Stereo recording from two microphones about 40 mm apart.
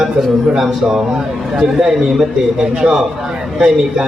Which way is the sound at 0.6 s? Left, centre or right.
Centre.